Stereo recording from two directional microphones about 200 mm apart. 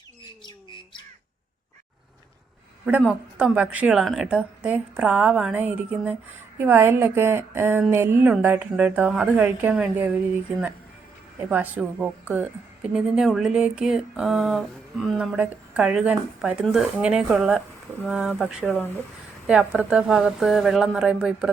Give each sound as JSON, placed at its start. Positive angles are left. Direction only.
{"t": 0.4, "sound": "bird", "side_deg": 25}
{"t": 3.1, "sound": "a woman's voice", "side_deg": -5}
{"t": 11.4, "sound": "a woman's voice", "side_deg": -10}